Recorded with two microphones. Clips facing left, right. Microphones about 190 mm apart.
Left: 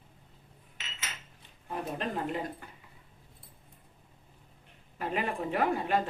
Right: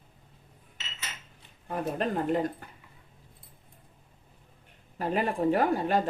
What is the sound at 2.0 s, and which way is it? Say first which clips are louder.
Speech: right 8 dB; 45° right (ahead or behind).